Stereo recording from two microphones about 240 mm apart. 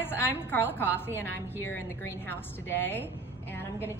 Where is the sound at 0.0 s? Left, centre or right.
Centre.